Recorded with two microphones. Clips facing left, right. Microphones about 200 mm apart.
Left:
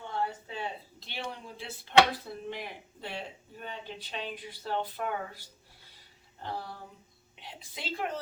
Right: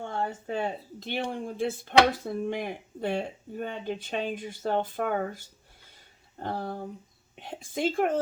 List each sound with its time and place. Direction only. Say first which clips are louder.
0.0 s speech: right 3 dB; 50° right (ahead or behind)